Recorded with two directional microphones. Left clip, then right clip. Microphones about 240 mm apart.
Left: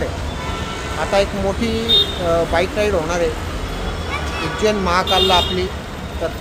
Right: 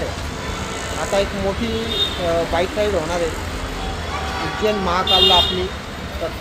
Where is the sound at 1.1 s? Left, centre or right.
Centre.